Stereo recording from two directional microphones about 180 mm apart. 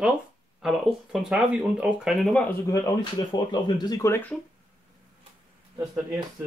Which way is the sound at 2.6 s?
20° left (ahead or behind).